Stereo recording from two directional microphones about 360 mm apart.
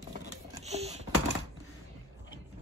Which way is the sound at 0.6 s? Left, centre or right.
Centre.